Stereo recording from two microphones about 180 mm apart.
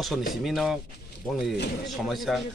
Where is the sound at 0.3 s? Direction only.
Centre (ahead or behind).